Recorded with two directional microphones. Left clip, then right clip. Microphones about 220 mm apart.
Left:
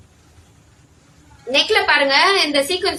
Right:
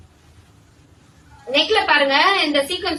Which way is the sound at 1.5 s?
50° left (ahead or behind).